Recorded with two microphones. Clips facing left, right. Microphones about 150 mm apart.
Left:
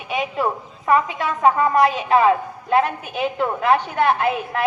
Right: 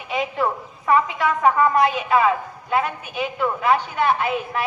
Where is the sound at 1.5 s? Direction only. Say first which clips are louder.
Left 1 dB; 35° left (ahead or behind).